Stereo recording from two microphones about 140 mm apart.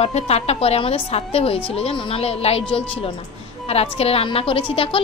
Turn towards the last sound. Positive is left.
turn(degrees=40)  # may be behind; listen again after turning